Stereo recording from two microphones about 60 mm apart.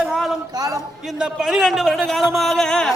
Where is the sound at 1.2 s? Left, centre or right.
Centre.